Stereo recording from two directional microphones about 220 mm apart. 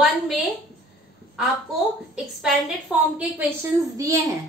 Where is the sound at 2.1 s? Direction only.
5° right (ahead or behind).